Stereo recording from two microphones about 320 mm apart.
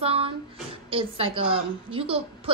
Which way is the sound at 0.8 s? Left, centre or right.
Centre.